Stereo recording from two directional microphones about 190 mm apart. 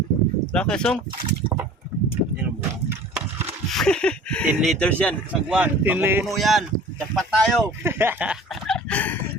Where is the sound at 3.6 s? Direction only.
5° left (ahead or behind).